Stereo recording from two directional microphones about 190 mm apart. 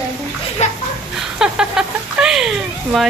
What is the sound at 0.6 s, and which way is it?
Speech, 35° left (ahead or behind).